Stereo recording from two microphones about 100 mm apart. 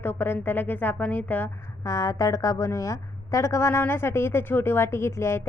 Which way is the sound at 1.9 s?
35° left (ahead or behind).